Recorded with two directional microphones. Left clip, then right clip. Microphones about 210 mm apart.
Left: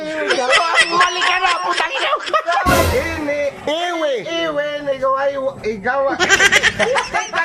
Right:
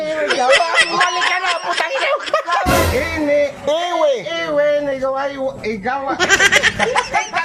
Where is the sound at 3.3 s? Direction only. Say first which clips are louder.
Right 5 dB; 25° left (ahead or behind).